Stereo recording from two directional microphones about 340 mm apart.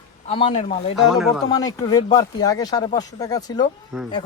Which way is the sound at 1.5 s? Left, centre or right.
Centre.